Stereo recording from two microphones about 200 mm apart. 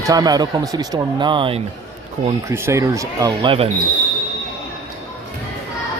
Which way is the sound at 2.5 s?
15° right (ahead or behind).